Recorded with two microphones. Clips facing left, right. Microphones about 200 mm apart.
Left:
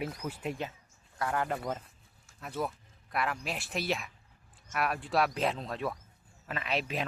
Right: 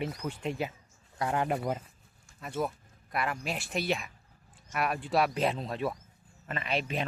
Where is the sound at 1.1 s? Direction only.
20° right (ahead or behind).